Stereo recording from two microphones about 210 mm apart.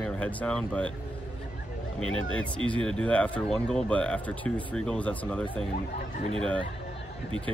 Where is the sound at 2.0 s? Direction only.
75° left (ahead or behind).